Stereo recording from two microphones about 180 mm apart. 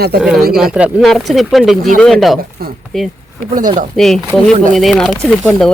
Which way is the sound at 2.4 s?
55° right (ahead or behind).